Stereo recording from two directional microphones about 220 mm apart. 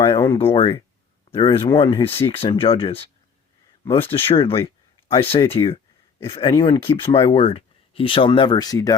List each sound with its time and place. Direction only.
0.0 s a sound: 15° left (ahead or behind)
0.5 s speech: 25° left (ahead or behind)
4.1 s speech: 25° left (ahead or behind)